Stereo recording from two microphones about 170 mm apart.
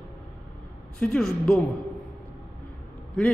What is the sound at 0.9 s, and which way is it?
Speech, 5° left (ahead or behind).